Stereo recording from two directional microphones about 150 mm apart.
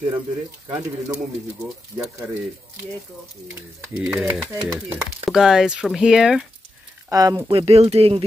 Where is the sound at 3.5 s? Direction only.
10° right (ahead or behind).